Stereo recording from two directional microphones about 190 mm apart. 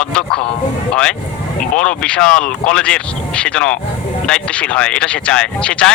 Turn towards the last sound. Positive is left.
turn(degrees=5)  # may be behind; listen again after turning